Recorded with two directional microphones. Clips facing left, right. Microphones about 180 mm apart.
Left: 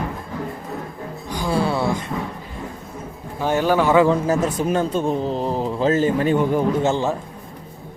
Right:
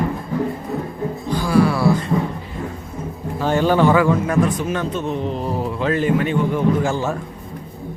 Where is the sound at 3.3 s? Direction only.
15° left (ahead or behind).